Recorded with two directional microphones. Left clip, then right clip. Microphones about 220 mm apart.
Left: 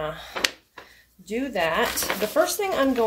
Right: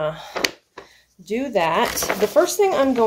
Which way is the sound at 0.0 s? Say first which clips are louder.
Right 4 dB; 35° right (ahead or behind).